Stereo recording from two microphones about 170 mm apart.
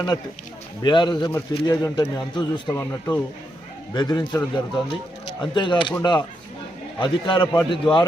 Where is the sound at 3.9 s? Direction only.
25° left (ahead or behind).